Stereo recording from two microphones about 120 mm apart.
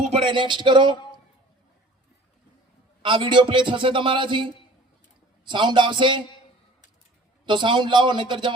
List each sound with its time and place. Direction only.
0.1 s a man's voice: 45° right (ahead or behind)
3.0 s a man's voice: 45° right (ahead or behind)
5.5 s a man's voice: 40° right (ahead or behind)
7.4 s a man's voice: 40° right (ahead or behind)